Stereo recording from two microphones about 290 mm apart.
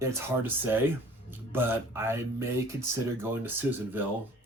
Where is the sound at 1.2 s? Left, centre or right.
Centre.